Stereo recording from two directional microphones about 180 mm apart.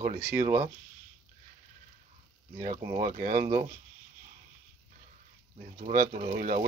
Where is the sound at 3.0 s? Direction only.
55° right (ahead or behind).